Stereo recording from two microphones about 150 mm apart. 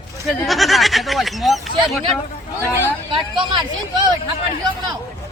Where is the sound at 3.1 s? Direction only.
30° right (ahead or behind).